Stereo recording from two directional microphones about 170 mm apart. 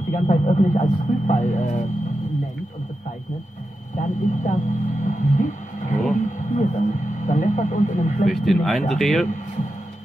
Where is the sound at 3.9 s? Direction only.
45° left (ahead or behind).